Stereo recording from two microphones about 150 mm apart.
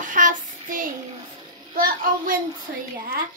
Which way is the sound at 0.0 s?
60° right (ahead or behind).